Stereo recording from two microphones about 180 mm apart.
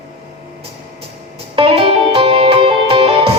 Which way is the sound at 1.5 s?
30° right (ahead or behind).